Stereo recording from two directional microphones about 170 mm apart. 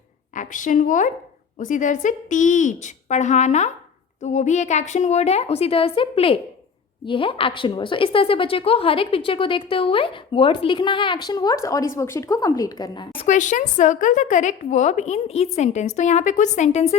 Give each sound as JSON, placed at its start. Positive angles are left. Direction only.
{"t": 0.3, "sound": "a woman's voice", "side_deg": 50}
{"t": 13.2, "sound": "a woman's voice", "side_deg": 45}